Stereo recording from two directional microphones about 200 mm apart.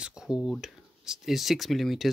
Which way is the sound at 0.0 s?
5° right (ahead or behind).